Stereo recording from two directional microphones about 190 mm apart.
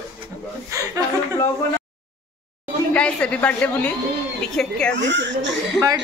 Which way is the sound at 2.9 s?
5° left (ahead or behind).